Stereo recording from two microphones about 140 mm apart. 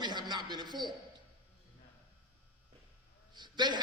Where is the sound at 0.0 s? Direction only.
30° right (ahead or behind).